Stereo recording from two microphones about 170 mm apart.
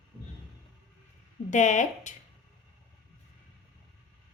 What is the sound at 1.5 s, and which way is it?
Speech, 45° left (ahead or behind).